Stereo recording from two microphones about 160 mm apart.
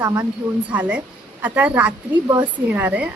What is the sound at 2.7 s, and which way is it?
Speech, 10° right (ahead or behind).